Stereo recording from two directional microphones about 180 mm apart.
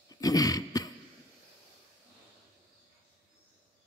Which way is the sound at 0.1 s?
20° left (ahead or behind).